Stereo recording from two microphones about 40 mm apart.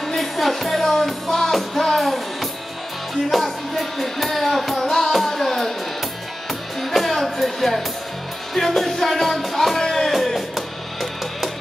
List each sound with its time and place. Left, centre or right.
0.0 s music: centre
4.8 s music: centre
6.8 s music: centre
10.1 s music: centre